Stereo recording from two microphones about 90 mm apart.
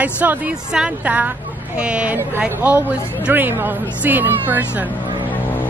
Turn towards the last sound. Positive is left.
turn(degrees=-20)  # may be behind; listen again after turning